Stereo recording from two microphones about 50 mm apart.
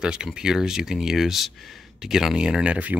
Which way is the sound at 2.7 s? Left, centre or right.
Right.